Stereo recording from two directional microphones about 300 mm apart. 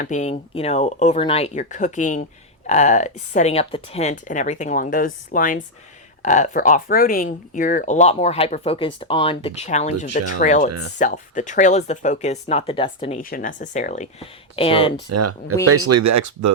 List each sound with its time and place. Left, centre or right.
0.0 s speech: left
15.1 s speech: right